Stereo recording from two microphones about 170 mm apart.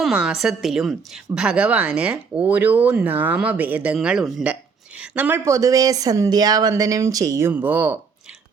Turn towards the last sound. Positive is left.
turn(degrees=-10)  # may be behind; listen again after turning